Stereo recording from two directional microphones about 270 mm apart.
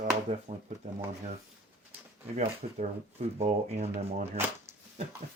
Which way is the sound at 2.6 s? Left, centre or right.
Right.